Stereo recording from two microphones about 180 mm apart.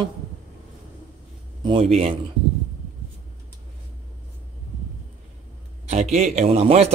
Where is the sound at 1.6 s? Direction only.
30° right (ahead or behind).